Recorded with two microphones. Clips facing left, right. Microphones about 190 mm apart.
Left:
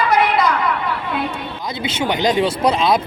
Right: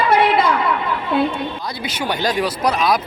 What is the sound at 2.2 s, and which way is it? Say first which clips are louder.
Speech: left 3 dB; 25° left (ahead or behind).